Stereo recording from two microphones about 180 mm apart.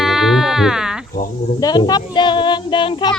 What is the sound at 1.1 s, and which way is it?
Speech, 50° left (ahead or behind).